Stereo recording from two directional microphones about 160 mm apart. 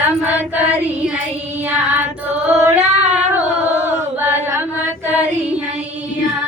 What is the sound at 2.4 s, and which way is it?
Music, 10° right (ahead or behind).